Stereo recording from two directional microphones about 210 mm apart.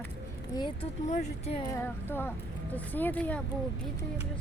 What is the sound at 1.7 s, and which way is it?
Speech, 10° left (ahead or behind).